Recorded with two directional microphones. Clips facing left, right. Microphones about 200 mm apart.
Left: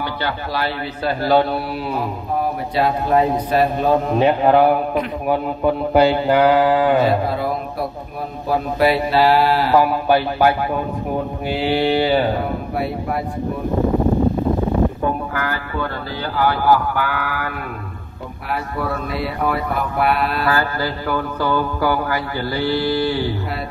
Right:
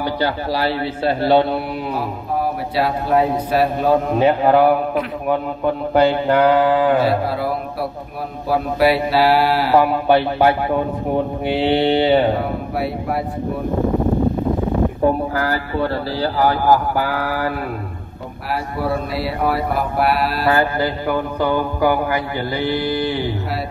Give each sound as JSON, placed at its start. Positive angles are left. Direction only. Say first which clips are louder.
{"t": 0.0, "sound": "speech", "louder": "right 4 dB", "side_deg": -35}
{"t": 2.7, "sound": "a man's voice", "louder": "left 1 dB", "side_deg": -5}
{"t": 5.9, "sound": "mantra", "louder": "even", "side_deg": 10}
{"t": 8.5, "sound": "a man's voice", "louder": "right 1 dB", "side_deg": -10}
{"t": 9.8, "sound": "a sound", "louder": "right 2 dB", "side_deg": -25}
{"t": 11.5, "sound": "a sound", "louder": "right 2 dB", "side_deg": -25}
{"t": 15.0, "sound": "speech", "louder": "right 4 dB", "side_deg": -35}
{"t": 19.1, "sound": "mantra", "louder": "right 1 dB", "side_deg": 0}
{"t": 20.4, "sound": "a sound", "louder": "right 3 dB", "side_deg": -20}